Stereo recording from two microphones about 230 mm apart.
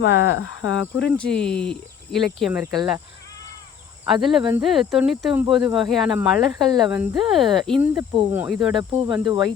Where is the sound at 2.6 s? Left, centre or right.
Centre.